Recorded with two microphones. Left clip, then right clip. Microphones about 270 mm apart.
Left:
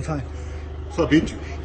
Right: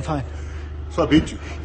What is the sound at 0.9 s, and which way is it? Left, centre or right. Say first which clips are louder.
Speech: right 1 dB; centre.